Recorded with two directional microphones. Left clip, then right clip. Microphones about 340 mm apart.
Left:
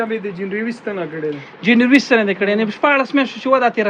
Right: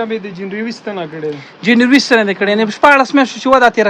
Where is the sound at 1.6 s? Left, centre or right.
Centre.